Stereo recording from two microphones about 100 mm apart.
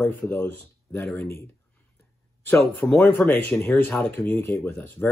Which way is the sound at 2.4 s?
20° left (ahead or behind).